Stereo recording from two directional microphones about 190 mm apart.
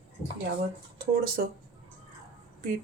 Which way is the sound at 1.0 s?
50° right (ahead or behind).